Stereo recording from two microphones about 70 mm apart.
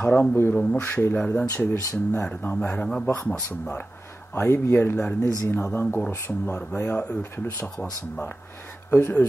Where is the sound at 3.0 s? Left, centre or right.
Left.